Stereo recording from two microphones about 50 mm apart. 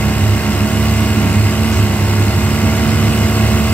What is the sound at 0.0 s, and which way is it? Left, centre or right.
Vehicle, left.